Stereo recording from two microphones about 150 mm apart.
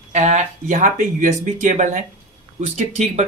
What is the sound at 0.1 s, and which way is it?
Speech, 50° right (ahead or behind).